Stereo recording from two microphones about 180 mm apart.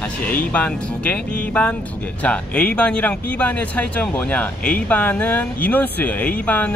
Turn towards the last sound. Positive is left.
turn(degrees=5)  # may be behind; listen again after turning